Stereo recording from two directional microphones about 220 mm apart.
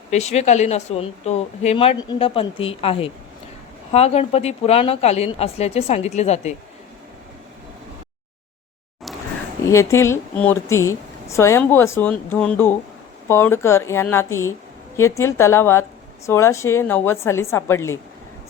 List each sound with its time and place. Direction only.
0.1 s speech: 30° left (ahead or behind)
9.6 s speech: 15° left (ahead or behind)